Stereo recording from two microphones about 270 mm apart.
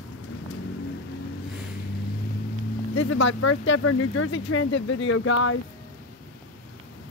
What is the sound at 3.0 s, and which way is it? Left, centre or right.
Speech, left.